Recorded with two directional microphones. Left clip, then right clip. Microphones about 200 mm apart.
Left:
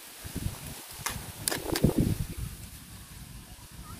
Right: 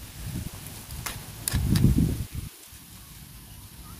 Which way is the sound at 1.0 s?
15° left (ahead or behind).